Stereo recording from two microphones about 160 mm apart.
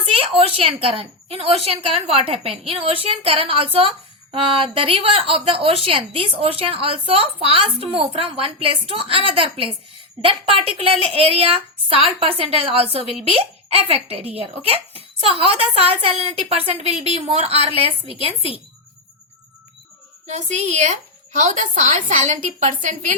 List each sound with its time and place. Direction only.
0.0 s a woman's voice: 35° right (ahead or behind)
20.2 s a woman's voice: 45° right (ahead or behind)